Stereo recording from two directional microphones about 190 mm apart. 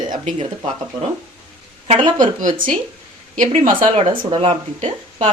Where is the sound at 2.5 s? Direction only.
25° right (ahead or behind).